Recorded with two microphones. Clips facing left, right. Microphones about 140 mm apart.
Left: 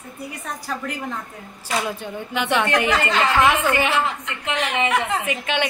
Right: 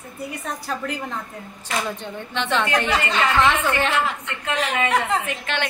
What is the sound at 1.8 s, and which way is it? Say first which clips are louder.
A woman's voice: left 2 dB; 10° left (ahead or behind).